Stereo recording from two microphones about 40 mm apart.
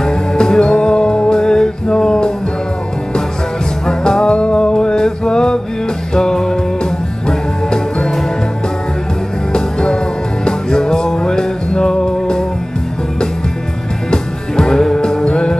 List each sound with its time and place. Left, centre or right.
0.0 s music: centre
3.8 s music: centre
9.5 s music: centre
14.1 s music: centre